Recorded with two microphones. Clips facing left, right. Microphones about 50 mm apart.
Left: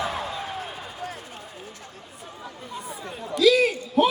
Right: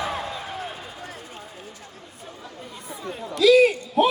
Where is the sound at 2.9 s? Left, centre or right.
Centre.